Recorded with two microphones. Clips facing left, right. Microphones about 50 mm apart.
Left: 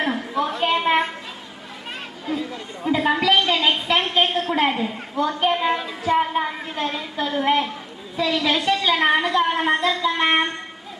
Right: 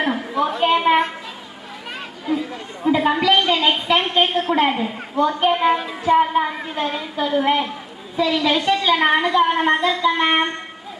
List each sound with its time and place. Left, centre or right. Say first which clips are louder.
0.0 s a woman's voice: right 2 dB; centre
2.2 s speech: right 4 dB; right
2.8 s a woman's voice: right 3 dB; centre
5.5 s child singing: right 4 dB; centre
6.1 s a woman's voice: right 4 dB; centre